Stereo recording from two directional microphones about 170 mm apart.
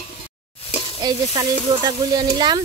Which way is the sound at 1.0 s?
20° right (ahead or behind).